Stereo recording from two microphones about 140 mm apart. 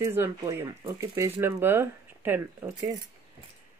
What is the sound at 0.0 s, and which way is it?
Speech, 20° right (ahead or behind).